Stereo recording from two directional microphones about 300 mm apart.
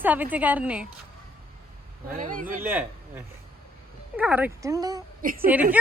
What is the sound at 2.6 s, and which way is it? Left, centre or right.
Speech, centre.